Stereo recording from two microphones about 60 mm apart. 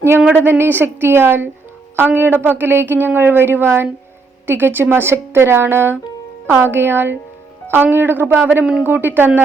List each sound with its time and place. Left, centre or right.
0.4 s a woman's voice: right